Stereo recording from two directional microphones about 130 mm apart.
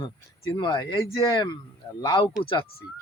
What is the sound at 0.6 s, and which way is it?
Speech, 35° left (ahead or behind).